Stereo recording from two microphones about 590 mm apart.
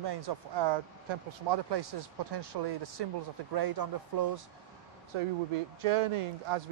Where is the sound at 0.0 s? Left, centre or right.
Right.